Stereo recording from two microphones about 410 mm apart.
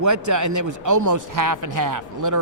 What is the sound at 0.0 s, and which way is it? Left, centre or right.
Speech, right.